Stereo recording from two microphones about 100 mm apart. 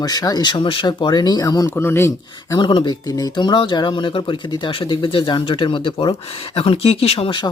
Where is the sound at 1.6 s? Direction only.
25° left (ahead or behind).